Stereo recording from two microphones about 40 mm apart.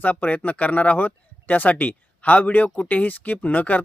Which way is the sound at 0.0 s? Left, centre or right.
Left.